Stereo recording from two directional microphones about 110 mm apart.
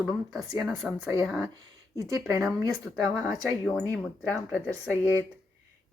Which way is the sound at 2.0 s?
25° right (ahead or behind).